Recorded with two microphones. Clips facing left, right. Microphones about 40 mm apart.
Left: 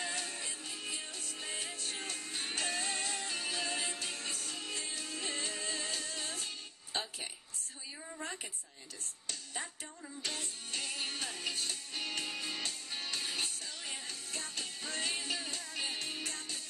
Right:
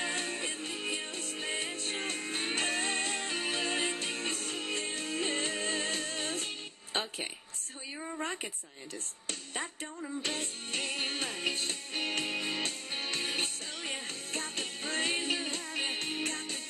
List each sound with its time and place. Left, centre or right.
0.0 s music: right
9.3 s music: right